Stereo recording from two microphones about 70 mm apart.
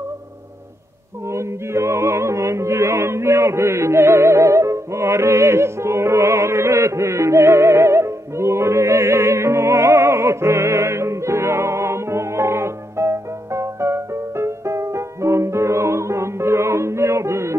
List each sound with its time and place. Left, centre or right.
1.3 s music: right